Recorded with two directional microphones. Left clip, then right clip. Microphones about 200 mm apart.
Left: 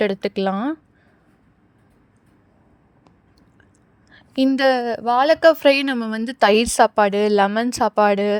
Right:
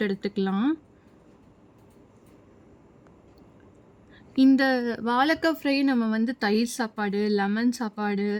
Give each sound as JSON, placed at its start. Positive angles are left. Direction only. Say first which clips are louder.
{"t": 0.0, "sound": "speech", "louder": "left 8 dB", "side_deg": 30}
{"t": 4.5, "sound": "speech", "louder": "left 6 dB", "side_deg": 30}